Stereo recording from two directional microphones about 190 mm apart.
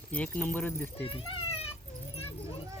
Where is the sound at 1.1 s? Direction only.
30° left (ahead or behind).